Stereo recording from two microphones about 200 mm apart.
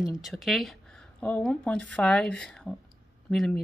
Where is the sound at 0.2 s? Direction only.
Centre (ahead or behind).